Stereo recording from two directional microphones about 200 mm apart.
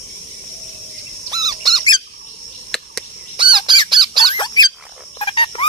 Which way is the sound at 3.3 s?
25° right (ahead or behind).